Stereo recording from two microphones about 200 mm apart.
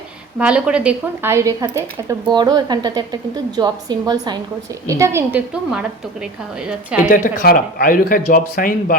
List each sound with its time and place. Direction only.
0.3 s a woman's voice: 5° right (ahead or behind)
7.1 s speech: 45° left (ahead or behind)